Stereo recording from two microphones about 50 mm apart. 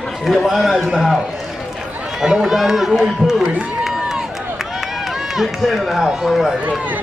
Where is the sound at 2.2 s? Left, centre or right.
Centre.